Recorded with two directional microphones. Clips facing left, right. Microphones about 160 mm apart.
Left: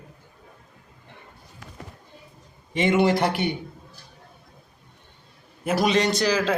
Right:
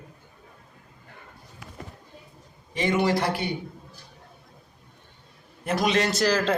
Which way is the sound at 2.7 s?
25° left (ahead or behind).